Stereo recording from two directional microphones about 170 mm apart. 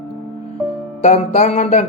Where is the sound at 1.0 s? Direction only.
40° left (ahead or behind).